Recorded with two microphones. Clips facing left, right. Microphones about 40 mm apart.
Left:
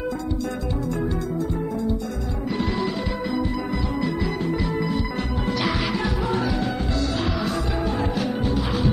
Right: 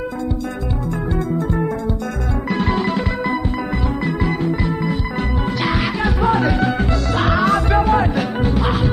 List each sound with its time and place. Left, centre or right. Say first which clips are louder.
2.5 s music: right 6 dB; right
6.2 s music: right 11 dB; right